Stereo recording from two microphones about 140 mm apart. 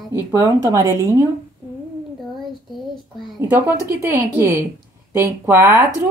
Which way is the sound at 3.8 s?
15° right (ahead or behind).